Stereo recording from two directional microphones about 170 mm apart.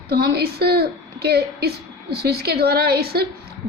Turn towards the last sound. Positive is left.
turn(degrees=-65)  # may be behind; listen again after turning